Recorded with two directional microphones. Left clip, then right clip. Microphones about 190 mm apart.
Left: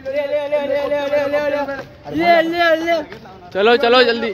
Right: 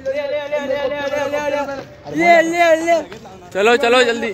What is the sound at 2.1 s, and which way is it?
Speech, 50° left (ahead or behind).